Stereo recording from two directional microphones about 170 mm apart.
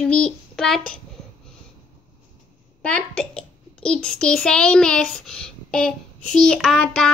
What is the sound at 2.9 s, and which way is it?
A child's voice, 5° left (ahead or behind).